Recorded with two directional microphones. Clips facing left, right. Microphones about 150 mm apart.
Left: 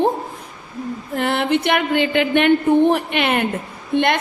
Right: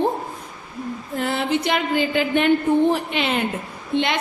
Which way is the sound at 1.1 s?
65° left (ahead or behind).